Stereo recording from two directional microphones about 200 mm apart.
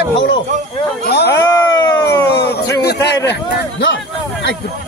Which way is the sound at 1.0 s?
55° left (ahead or behind).